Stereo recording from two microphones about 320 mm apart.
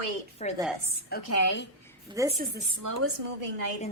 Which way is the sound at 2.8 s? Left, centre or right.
Right.